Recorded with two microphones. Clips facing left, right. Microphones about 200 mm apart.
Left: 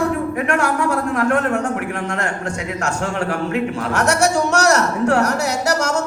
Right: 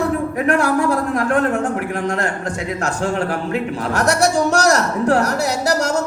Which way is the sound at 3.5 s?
35° right (ahead or behind).